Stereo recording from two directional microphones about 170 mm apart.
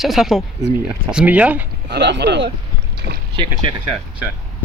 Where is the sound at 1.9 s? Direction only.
85° right.